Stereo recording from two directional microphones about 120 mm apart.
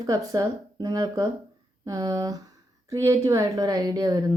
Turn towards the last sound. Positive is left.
turn(degrees=-30)  # may be behind; listen again after turning